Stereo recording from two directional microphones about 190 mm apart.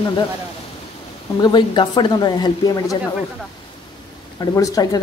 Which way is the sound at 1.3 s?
20° left (ahead or behind).